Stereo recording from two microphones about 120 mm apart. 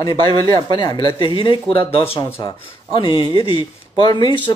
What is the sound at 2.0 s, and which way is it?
Speech, 20° left (ahead or behind).